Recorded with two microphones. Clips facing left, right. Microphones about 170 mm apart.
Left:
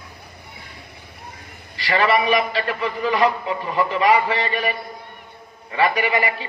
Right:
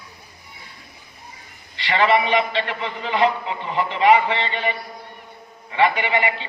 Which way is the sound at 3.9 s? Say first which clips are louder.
Right 3 dB; 35° left (ahead or behind).